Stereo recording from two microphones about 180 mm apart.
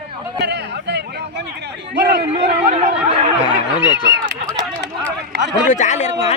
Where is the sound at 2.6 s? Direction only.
40° right (ahead or behind).